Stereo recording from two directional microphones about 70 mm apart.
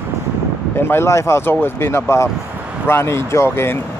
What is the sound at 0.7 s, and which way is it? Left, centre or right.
Speech, left.